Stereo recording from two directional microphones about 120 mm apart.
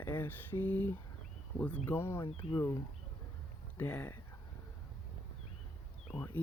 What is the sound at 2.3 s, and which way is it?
Speech, 50° left (ahead or behind).